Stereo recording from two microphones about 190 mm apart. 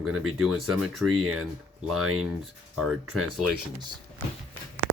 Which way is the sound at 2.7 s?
Centre (ahead or behind).